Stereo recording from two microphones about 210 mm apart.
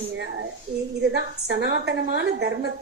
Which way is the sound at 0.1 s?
55° right (ahead or behind).